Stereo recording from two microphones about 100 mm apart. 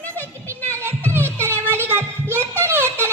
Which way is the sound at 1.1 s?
25° right (ahead or behind).